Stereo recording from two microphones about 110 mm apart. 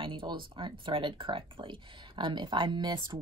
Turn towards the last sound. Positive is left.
turn(degrees=-40)  # may be behind; listen again after turning